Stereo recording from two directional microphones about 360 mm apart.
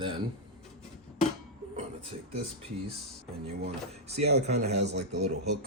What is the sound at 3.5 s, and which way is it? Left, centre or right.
A man's voice, centre.